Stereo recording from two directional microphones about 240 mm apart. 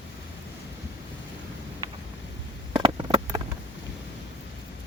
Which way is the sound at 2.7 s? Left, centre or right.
Centre.